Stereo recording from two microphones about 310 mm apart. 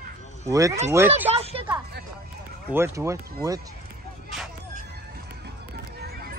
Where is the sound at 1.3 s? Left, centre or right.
Centre.